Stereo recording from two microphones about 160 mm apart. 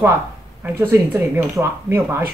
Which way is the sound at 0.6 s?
15° right (ahead or behind).